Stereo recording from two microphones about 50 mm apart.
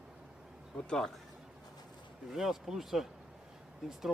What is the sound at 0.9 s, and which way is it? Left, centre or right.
Speech, centre.